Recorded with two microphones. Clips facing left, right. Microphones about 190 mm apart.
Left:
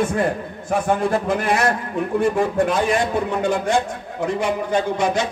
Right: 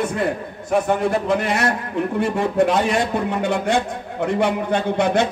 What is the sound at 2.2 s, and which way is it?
A man's voice, 60° right (ahead or behind).